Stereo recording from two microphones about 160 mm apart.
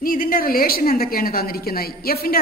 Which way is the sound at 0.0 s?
60° left (ahead or behind).